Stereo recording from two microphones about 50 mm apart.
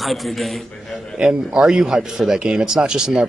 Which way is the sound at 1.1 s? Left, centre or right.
Centre.